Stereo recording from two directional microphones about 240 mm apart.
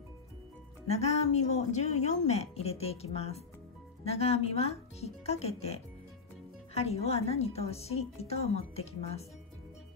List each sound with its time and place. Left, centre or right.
0.8 s speech: left